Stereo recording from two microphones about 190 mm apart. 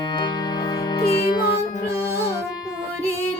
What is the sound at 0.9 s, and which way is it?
Music, 25° left (ahead or behind).